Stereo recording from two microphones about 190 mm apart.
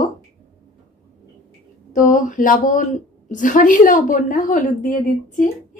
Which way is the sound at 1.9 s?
45° left (ahead or behind).